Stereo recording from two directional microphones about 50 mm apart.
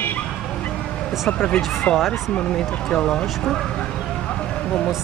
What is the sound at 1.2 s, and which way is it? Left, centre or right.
Speech, left.